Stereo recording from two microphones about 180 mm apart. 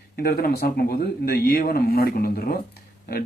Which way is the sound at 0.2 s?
55° left (ahead or behind).